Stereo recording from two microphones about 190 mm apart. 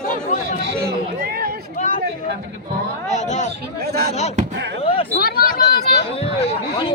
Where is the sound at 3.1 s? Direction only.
40° left (ahead or behind).